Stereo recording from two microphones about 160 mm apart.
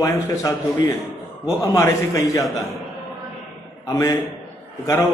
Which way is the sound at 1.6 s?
20° left (ahead or behind).